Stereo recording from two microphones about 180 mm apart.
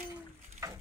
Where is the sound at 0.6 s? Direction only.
15° right (ahead or behind).